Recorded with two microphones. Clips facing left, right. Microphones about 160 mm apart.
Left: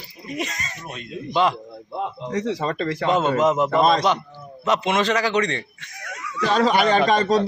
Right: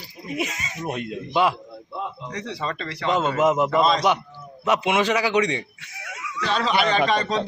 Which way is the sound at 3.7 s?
50° left (ahead or behind).